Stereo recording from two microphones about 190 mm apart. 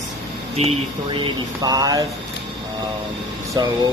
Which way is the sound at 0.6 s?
30° right (ahead or behind).